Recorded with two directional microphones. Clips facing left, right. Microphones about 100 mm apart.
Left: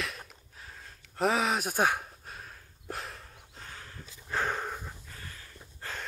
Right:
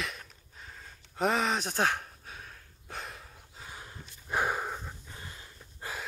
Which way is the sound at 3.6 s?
15° right (ahead or behind).